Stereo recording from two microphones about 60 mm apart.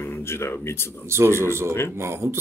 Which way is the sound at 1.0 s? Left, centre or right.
Right.